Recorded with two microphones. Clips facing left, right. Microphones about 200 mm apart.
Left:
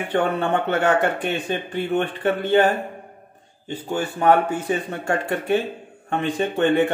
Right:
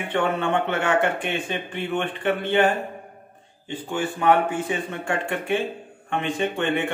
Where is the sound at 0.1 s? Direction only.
40° left (ahead or behind).